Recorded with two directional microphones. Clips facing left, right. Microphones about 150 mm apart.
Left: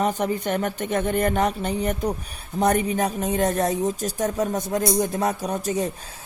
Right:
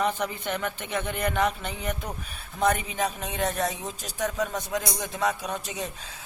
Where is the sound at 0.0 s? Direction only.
40° left (ahead or behind).